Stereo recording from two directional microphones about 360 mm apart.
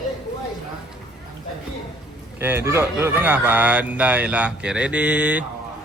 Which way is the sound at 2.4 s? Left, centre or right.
Centre.